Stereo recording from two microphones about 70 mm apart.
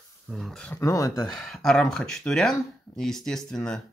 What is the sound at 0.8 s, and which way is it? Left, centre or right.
Speech, left.